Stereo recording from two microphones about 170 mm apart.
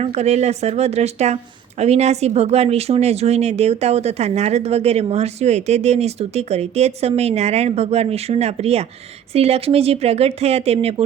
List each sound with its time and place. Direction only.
0.0 s speech: 40° right (ahead or behind)